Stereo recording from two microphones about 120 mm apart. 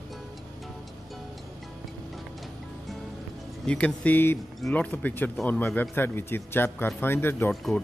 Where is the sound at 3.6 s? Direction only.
10° left (ahead or behind).